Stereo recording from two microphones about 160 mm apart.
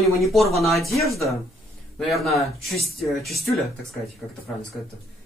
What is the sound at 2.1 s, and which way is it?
Speech, centre (ahead or behind).